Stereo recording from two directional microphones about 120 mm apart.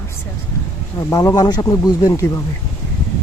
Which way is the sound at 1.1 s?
30° left (ahead or behind).